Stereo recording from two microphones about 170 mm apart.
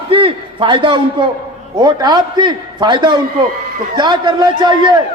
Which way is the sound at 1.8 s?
25° right (ahead or behind).